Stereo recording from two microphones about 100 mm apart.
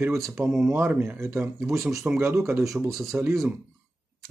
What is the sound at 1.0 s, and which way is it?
Speech, 25° right (ahead or behind).